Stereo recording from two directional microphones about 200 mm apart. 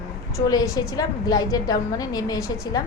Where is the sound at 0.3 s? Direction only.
15° left (ahead or behind).